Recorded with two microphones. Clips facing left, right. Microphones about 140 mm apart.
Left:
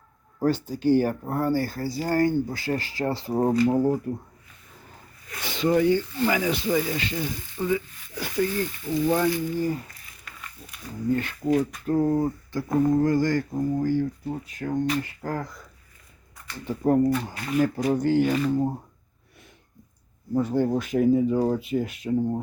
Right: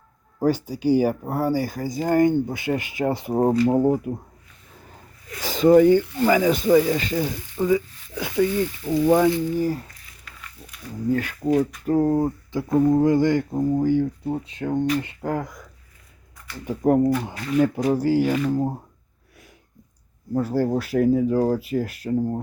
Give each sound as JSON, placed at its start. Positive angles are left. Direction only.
{"t": 0.3, "sound": "speech", "side_deg": -10}
{"t": 5.4, "sound": "speech", "side_deg": -40}
{"t": 8.1, "sound": "speech", "side_deg": -20}
{"t": 11.1, "sound": "speech", "side_deg": -5}
{"t": 12.5, "sound": "speech", "side_deg": -20}
{"t": 16.6, "sound": "speech", "side_deg": -10}
{"t": 20.3, "sound": "speech", "side_deg": -5}